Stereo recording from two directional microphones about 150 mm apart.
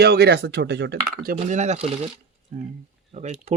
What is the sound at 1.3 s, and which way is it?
Speech, 50° right (ahead or behind).